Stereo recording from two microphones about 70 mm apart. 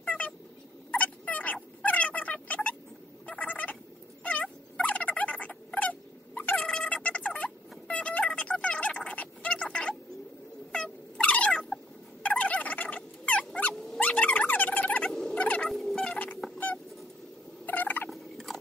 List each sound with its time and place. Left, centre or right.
0.0 s a sound: left
0.9 s dog: left
3.3 s fowl: left
4.2 s cat: centre
10.7 s a sound: centre
15.0 s fowl: centre
15.3 s turkey: centre
15.6 s turkey: centre
16.0 s music: left
16.5 s rodents: left
17.6 s fowl: left
18.1 s fowl: centre